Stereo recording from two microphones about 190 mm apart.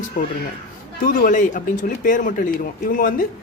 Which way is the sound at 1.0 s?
45° left (ahead or behind).